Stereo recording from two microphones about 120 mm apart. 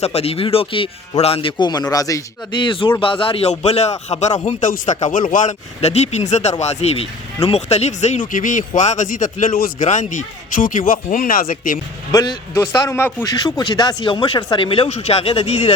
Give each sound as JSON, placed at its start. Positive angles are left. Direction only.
{"t": 0.0, "sound": "speech", "side_deg": 55}
{"t": 2.5, "sound": "speech", "side_deg": 45}
{"t": 12.1, "sound": "speech", "side_deg": 35}
{"t": 12.5, "sound": "a man's voice", "side_deg": 25}
{"t": 13.2, "sound": "speech", "side_deg": 30}
{"t": 14.8, "sound": "speech", "side_deg": 60}